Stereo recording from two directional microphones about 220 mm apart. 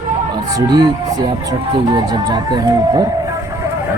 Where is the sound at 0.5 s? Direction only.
15° right (ahead or behind).